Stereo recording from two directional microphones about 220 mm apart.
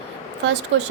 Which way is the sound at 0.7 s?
55° right (ahead or behind).